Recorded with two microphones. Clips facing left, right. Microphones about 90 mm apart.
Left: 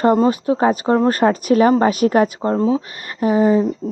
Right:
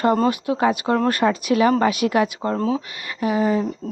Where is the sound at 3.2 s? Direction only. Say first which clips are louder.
Left 5 dB; 35° left (ahead or behind).